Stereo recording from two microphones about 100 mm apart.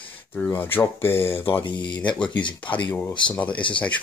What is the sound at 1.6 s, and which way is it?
Speech, 50° left (ahead or behind).